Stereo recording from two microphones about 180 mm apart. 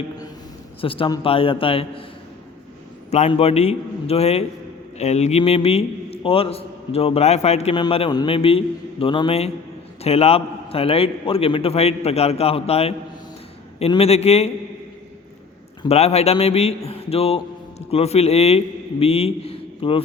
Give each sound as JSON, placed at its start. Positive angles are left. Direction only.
{"t": 0.8, "sound": "a man's voice", "side_deg": 30}
{"t": 3.1, "sound": "a man's voice", "side_deg": 35}
{"t": 15.8, "sound": "a man's voice", "side_deg": 35}